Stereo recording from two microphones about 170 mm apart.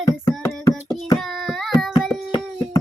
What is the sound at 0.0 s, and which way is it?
Music, 15° left (ahead or behind).